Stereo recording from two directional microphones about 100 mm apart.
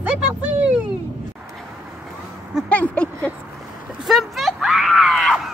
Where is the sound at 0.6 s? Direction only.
10° right (ahead or behind).